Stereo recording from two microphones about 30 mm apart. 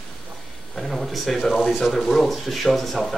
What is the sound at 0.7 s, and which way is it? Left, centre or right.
Speech, centre.